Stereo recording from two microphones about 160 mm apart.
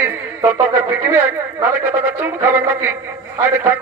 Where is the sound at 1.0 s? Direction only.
15° right (ahead or behind).